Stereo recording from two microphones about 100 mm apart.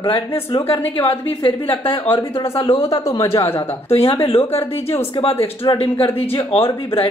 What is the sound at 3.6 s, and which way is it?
Speech, 75° left (ahead or behind).